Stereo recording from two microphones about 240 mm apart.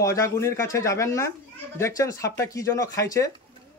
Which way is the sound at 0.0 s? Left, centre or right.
Centre.